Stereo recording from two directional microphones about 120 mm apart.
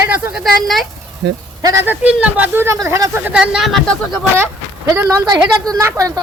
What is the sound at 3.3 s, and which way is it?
Speech, 10° right (ahead or behind).